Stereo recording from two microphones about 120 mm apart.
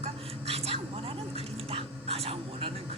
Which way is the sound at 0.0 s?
55° right (ahead or behind).